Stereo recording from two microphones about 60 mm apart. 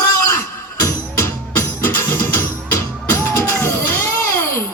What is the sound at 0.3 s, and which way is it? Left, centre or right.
Music, left.